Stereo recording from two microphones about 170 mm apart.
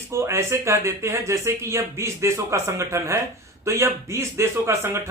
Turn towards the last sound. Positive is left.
turn(degrees=-15)  # may be behind; listen again after turning